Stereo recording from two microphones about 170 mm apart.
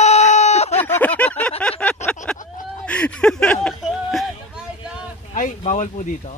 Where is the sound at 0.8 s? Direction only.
10° left (ahead or behind).